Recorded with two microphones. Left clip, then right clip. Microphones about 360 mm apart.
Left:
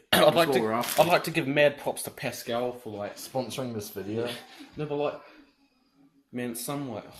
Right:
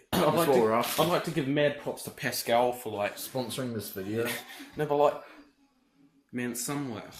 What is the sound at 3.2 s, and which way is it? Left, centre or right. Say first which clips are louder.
Speech: left 2 dB; centre.